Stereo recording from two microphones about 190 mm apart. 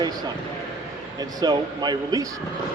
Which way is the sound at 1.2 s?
20° right (ahead or behind).